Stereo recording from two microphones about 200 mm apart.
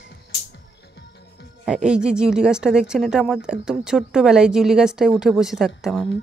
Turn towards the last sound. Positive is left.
turn(degrees=0)  # may be behind; listen again after turning